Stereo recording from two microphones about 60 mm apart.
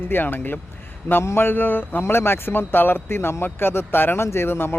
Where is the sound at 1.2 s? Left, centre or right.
Left.